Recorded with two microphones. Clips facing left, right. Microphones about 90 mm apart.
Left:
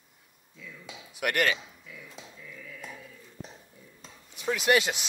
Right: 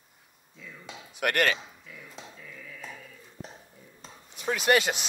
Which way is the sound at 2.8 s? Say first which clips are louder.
Right 1 dB; 15° left (ahead or behind).